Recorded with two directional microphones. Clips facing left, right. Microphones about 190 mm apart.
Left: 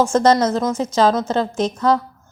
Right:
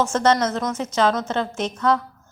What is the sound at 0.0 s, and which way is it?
Speech, 35° left (ahead or behind).